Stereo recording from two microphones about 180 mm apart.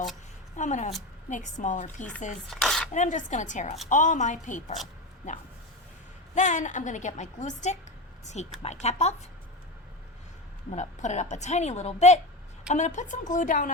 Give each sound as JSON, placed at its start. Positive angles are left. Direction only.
{"t": 0.5, "sound": "a woman's voice", "side_deg": 40}
{"t": 2.5, "sound": "dishes", "side_deg": 0}
{"t": 2.9, "sound": "a woman's voice", "side_deg": 40}
{"t": 6.3, "sound": "a woman's voice", "side_deg": 45}
{"t": 10.7, "sound": "a woman's voice", "side_deg": 40}